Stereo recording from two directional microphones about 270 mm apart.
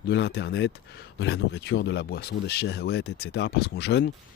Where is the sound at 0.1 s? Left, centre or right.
Left.